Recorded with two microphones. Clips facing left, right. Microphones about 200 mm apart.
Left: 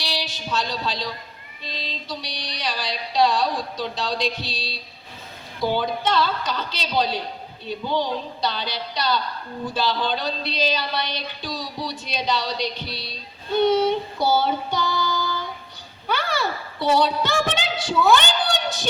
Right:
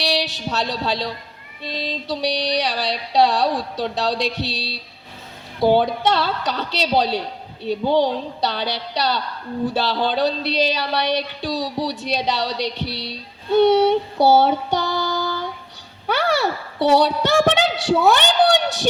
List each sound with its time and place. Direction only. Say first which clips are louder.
0.0 s a sound: right 7 dB; 75° right (ahead or behind)
1.7 s music: right 7 dB; 70° right (ahead or behind)
16.0 s a woman's voice: right 5 dB; 70° right (ahead or behind)
18.0 s music: right 2 dB; 70° right (ahead or behind)